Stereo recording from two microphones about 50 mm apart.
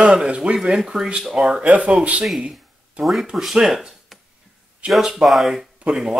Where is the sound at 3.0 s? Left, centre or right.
Right.